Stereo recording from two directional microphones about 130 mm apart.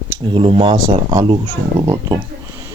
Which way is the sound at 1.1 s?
35° right (ahead or behind).